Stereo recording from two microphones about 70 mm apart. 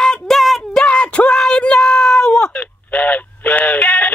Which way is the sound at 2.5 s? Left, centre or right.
Left.